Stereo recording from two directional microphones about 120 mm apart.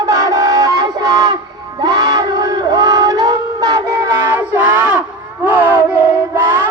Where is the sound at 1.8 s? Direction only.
30° right (ahead or behind).